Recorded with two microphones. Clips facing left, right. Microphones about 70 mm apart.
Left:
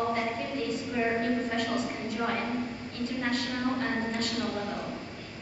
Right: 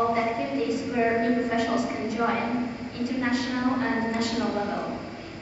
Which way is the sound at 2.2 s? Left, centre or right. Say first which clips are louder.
Right 5 dB; centre.